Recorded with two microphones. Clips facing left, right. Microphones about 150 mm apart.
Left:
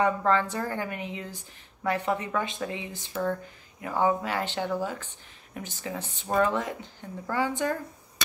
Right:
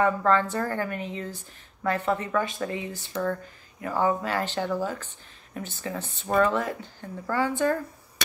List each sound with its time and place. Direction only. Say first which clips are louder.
0.0 s a woman's voice: right 2 dB; 15° left (ahead or behind)